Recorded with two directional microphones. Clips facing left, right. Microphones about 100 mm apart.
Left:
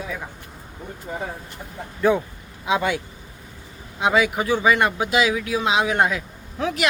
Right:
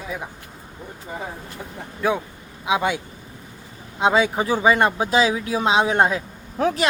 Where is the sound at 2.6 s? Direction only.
15° right (ahead or behind).